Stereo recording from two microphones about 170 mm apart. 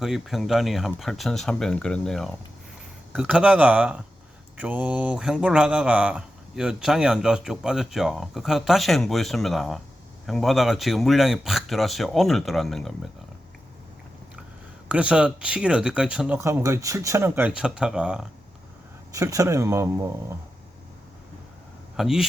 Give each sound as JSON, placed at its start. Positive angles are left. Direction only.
{"t": 0.0, "sound": "speech", "side_deg": 0}
{"t": 14.8, "sound": "speech", "side_deg": -5}
{"t": 19.1, "sound": "speech", "side_deg": -20}
{"t": 21.9, "sound": "speech", "side_deg": 0}